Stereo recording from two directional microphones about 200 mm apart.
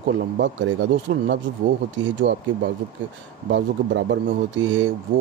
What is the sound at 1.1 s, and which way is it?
Speech, 90° right.